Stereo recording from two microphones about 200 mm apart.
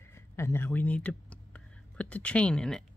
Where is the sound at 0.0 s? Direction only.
15° left (ahead or behind).